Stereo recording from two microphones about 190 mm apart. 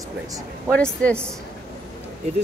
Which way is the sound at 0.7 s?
5° left (ahead or behind).